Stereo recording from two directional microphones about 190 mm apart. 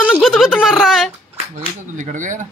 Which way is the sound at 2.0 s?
40° right (ahead or behind).